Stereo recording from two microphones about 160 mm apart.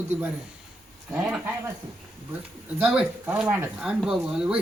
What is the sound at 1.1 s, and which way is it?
Speech, 5° right (ahead or behind).